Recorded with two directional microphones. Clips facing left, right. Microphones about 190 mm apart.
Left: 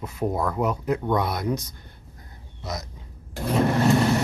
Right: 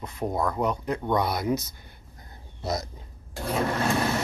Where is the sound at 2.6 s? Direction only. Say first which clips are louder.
Right 4 dB; 30° right (ahead or behind).